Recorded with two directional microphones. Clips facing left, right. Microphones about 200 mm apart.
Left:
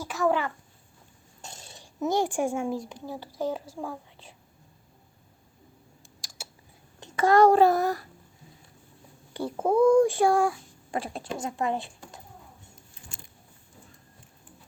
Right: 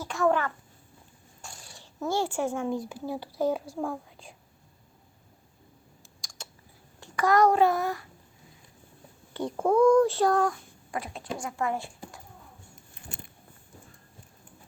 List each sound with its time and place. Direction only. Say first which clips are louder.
0.0 s a sound: even; 5° left (ahead or behind)
1.4 s speech: left 2 dB; 20° left (ahead or behind); by 3.6 s 10° right (ahead or behind)
6.2 s typing: left 1 dB; 10° left (ahead or behind)
7.0 s a child's voice: left 3 dB; 25° left (ahead or behind)
9.3 s a child's voice: even; 5° left (ahead or behind)
10.9 s speech: left 2 dB; 30° left (ahead or behind)
12.9 s a sound: right 6 dB; 60° right (ahead or behind)